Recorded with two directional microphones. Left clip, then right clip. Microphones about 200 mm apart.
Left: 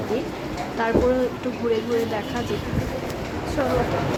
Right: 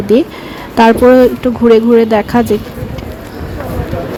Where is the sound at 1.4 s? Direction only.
40° right (ahead or behind).